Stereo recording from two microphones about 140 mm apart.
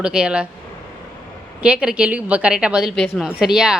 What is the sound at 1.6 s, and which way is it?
A woman's voice, 5° right (ahead or behind).